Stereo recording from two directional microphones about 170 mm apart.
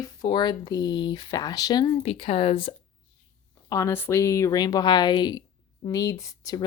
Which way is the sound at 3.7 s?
15° left (ahead or behind).